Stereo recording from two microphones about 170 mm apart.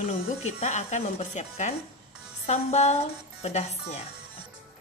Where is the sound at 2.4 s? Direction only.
40° left (ahead or behind).